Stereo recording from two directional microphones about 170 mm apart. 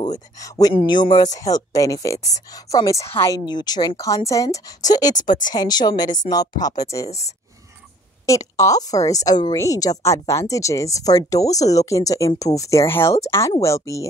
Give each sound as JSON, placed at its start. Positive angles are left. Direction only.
{"t": 0.0, "sound": "a woman's voice", "side_deg": 20}
{"t": 7.1, "sound": "speech", "side_deg": 40}
{"t": 8.3, "sound": "a woman's voice", "side_deg": 20}